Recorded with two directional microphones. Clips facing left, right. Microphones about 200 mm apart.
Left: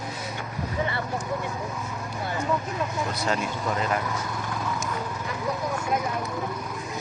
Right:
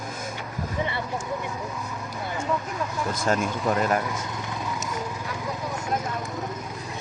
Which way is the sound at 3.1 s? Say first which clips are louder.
Right 3 dB; 50° right (ahead or behind).